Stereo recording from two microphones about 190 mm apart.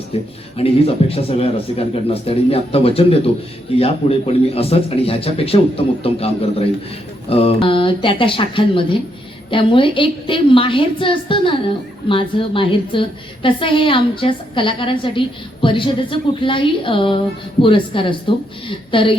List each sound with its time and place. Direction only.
0.1 s a man's voice: 30° left (ahead or behind)